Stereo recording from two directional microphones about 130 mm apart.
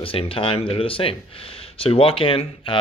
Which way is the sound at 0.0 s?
45° left (ahead or behind).